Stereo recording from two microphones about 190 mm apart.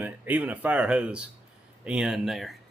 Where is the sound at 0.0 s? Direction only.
10° right (ahead or behind).